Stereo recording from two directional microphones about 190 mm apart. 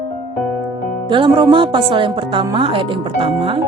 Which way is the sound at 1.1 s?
25° right (ahead or behind).